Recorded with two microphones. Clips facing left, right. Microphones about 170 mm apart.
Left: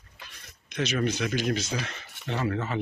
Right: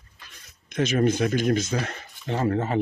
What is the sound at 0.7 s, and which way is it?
Speech, 50° right (ahead or behind).